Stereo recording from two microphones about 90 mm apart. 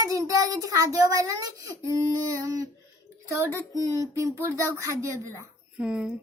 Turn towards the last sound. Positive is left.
turn(degrees=-10)  # may be behind; listen again after turning